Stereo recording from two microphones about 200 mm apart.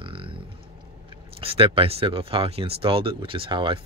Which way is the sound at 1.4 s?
25° right (ahead or behind).